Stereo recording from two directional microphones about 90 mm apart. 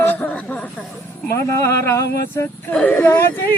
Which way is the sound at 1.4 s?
30° left (ahead or behind).